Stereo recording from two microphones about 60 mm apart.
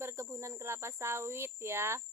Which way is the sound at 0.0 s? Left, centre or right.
Right.